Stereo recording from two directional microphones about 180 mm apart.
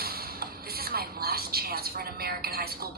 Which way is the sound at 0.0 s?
60° right (ahead or behind).